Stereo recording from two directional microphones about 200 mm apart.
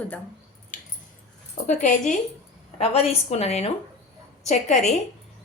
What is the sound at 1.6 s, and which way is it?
A woman's voice, 40° left (ahead or behind).